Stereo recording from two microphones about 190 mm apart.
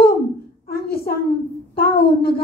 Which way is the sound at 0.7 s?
55° left (ahead or behind).